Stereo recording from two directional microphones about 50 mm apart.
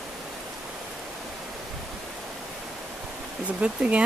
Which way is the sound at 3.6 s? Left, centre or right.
Right.